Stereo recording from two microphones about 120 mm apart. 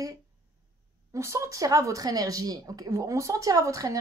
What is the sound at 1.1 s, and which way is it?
Speech, 25° right (ahead or behind).